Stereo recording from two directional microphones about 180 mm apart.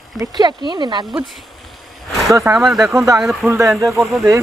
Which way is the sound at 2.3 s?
15° right (ahead or behind).